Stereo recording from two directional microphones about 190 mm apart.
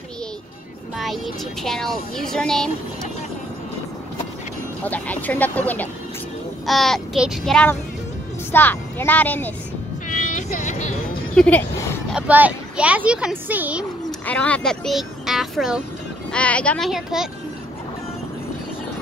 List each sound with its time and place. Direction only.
0.9 s speech: centre (ahead or behind)
4.8 s speech: 10° left (ahead or behind)
10.0 s vehicle: 40° left (ahead or behind)
11.3 s speech: 5° left (ahead or behind)
12.1 s speech: 5° right (ahead or behind)
14.2 s speech: 5° left (ahead or behind)